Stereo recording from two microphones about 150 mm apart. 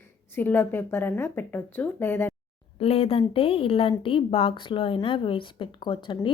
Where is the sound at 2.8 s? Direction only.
40° left (ahead or behind).